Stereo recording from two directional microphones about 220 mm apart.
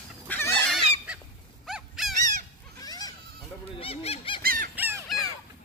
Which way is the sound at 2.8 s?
15° left (ahead or behind).